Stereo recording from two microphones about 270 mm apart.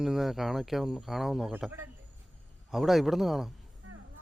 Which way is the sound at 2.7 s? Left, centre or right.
Centre.